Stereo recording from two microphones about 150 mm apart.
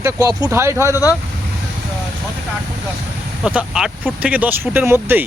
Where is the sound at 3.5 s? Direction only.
5° right (ahead or behind).